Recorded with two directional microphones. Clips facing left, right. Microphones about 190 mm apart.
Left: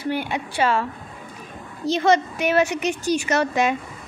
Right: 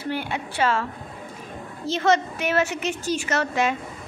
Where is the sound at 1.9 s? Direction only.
15° left (ahead or behind).